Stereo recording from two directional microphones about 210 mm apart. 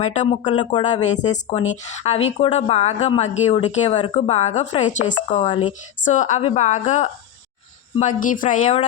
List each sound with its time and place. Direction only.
0.0 s speech: 30° left (ahead or behind)
1.0 s speech: 35° left (ahead or behind)